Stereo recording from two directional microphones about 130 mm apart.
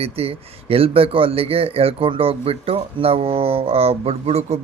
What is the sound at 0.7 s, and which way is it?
Speech, 45° right (ahead or behind).